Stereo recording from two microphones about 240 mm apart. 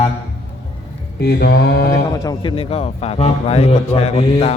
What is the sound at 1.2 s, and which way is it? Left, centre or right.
Music, left.